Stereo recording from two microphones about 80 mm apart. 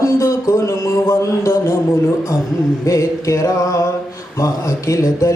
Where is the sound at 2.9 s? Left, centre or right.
Left.